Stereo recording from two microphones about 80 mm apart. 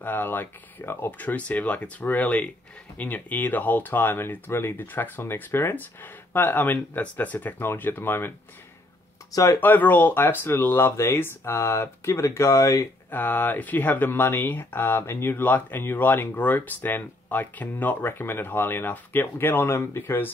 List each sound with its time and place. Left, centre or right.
0.0 s speech: left
3.0 s speech: left
9.3 s speech: left
9.6 s speech: left
13.1 s speech: left